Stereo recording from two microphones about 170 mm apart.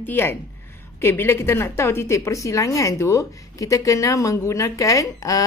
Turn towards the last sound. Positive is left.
turn(degrees=20)  # may be behind; listen again after turning